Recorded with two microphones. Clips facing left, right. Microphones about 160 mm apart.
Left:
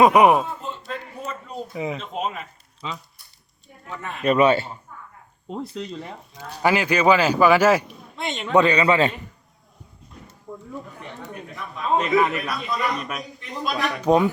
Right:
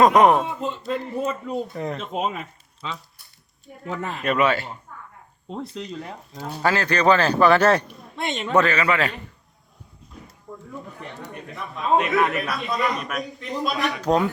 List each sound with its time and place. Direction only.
0.0 s a man's voice: 10° left (ahead or behind)
4.4 s a man's voice: 25° left (ahead or behind)
5.5 s speech: centre (ahead or behind)
6.6 s a man's voice: 15° left (ahead or behind)
8.5 s a man's voice: 20° left (ahead or behind)
10.2 s speech: centre (ahead or behind)